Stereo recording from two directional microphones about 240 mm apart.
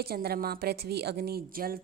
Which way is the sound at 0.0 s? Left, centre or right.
Right.